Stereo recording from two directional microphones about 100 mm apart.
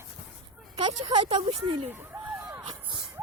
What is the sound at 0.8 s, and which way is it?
Speech, 50° right (ahead or behind).